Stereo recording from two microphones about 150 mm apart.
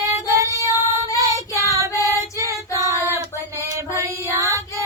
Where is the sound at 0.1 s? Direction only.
20° right (ahead or behind).